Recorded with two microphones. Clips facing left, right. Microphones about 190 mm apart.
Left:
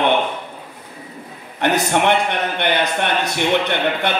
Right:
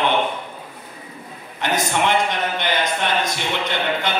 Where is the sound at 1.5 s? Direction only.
60° left (ahead or behind).